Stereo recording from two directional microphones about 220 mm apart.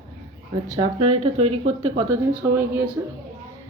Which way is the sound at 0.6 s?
25° right (ahead or behind).